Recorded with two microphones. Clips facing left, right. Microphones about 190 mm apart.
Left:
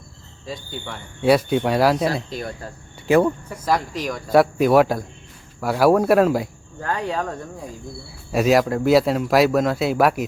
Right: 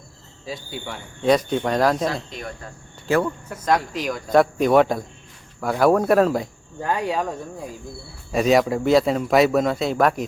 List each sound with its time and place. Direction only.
0.4 s speech: 5° right (ahead or behind)
1.2 s speech: 10° left (ahead or behind)
2.3 s speech: 35° left (ahead or behind)
3.5 s speech: centre (ahead or behind)
6.8 s speech: 10° right (ahead or behind)
8.3 s speech: 5° left (ahead or behind)